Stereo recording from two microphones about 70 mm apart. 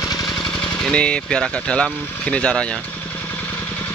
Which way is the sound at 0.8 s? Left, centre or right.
Centre.